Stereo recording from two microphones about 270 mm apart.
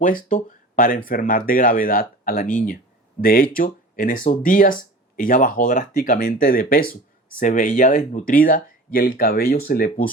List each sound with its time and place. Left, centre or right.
0.0 s speech: left